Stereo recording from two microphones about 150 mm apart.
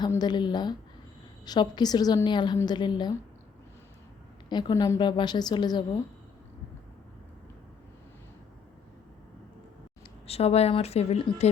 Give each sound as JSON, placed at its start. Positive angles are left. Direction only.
{"t": 0.2, "sound": "a woman's voice", "side_deg": 30}
{"t": 4.4, "sound": "a woman's voice", "side_deg": 30}
{"t": 4.9, "sound": "a woman's voice", "side_deg": 30}
{"t": 10.2, "sound": "speech", "side_deg": 45}